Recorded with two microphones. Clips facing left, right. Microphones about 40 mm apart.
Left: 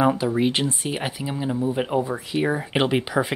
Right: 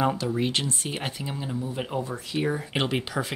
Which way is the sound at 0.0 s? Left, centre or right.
Centre.